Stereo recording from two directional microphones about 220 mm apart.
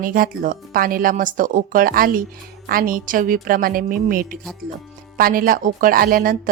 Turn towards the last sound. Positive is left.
turn(degrees=-40)  # may be behind; listen again after turning